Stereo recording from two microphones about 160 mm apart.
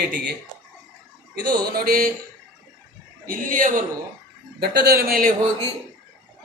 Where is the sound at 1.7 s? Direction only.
65° right (ahead or behind).